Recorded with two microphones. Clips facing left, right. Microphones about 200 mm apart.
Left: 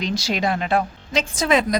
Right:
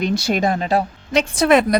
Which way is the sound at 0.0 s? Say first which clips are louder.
Right 4 dB; 55° right (ahead or behind).